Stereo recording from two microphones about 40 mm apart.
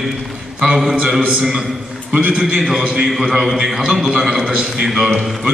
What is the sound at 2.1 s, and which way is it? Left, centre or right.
Speech, right.